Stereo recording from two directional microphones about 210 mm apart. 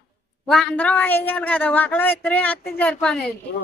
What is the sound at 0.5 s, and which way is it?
Speech, 5° left (ahead or behind).